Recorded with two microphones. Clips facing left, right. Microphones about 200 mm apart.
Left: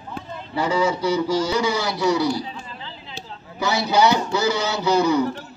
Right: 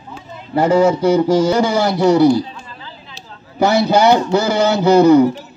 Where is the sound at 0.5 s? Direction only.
50° right (ahead or behind).